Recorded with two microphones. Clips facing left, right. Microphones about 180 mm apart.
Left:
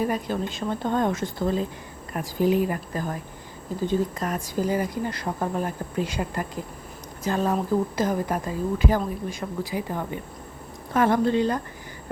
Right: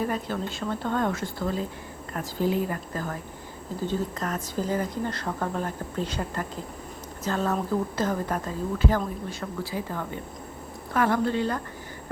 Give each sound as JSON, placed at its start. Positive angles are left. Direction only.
{"t": 0.0, "sound": "a woman's voice", "side_deg": 15}